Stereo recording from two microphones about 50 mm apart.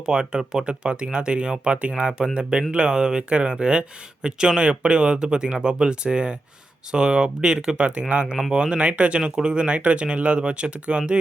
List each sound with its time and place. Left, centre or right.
0.0 s speech: centre